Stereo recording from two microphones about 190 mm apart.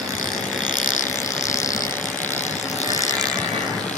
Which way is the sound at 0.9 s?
40° left (ahead or behind).